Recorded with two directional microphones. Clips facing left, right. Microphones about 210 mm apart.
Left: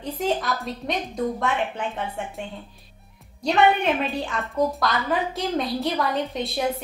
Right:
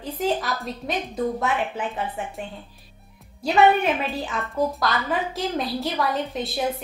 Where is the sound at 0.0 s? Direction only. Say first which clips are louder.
Even; centre (ahead or behind).